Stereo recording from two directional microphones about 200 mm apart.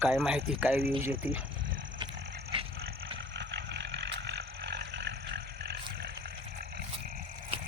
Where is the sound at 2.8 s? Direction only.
60° right (ahead or behind).